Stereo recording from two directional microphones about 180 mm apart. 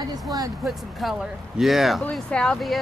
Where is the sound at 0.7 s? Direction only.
Centre (ahead or behind).